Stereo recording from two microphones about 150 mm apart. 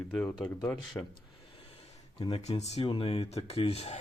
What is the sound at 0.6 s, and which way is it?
Speech, 30° left (ahead or behind).